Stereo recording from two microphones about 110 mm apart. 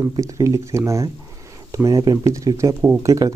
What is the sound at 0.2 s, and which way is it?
Speech, 30° right (ahead or behind).